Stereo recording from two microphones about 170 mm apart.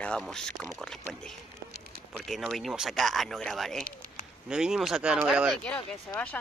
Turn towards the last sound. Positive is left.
turn(degrees=5)  # may be behind; listen again after turning